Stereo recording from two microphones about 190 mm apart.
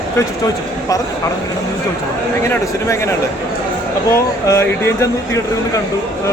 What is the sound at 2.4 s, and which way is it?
Speech, 15° left (ahead or behind).